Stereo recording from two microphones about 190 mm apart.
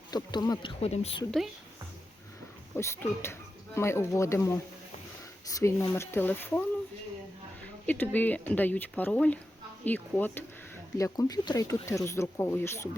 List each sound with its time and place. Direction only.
0.1 s speech: 20° left (ahead or behind)
0.8 s a woman's voice: 35° left (ahead or behind)
2.7 s speech: 15° left (ahead or behind)
7.9 s speech: 10° left (ahead or behind)